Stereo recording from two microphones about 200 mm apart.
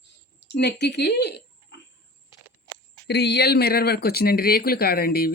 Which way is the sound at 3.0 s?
55° left (ahead or behind).